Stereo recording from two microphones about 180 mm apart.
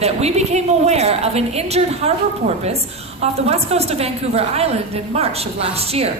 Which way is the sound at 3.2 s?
35° right (ahead or behind).